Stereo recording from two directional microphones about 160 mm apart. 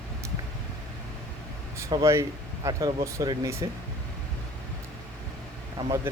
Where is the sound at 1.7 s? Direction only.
20° right (ahead or behind).